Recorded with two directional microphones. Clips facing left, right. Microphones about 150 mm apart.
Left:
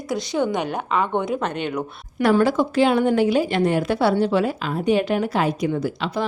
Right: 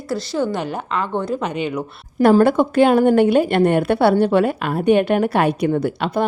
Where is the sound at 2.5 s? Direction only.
55° right (ahead or behind).